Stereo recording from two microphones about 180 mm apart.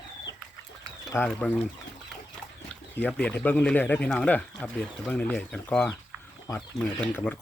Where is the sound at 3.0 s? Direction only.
5° left (ahead or behind).